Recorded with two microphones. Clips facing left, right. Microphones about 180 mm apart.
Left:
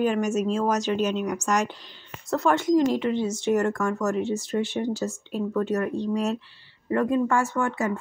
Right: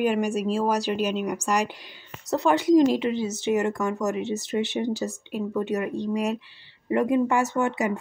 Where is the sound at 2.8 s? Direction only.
20° right (ahead or behind).